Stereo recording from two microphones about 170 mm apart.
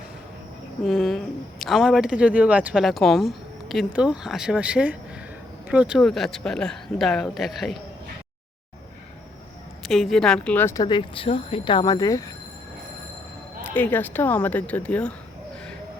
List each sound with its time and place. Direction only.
0.9 s a woman's voice: centre (ahead or behind)
9.8 s a woman's voice: centre (ahead or behind)
10.8 s speech: 30° left (ahead or behind)
13.7 s a woman's voice: 10° left (ahead or behind)